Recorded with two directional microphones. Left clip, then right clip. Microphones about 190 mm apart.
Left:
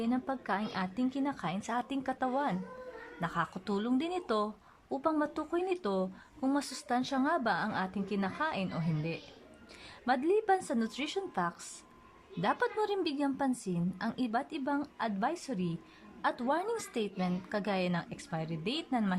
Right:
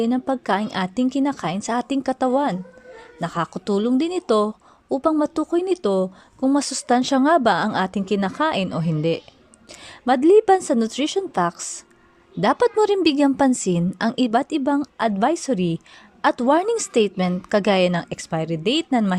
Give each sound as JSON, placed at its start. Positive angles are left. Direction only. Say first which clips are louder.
{"t": 0.0, "sound": "a woman's voice", "louder": "right 13 dB", "side_deg": -30}